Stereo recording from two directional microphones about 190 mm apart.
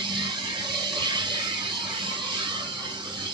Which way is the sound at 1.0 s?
25° right (ahead or behind).